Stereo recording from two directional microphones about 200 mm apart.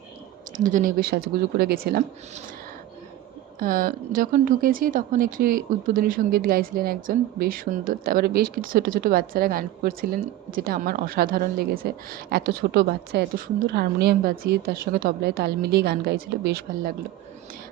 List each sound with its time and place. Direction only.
0.5 s speech: 40° right (ahead or behind)
3.6 s speech: 45° right (ahead or behind)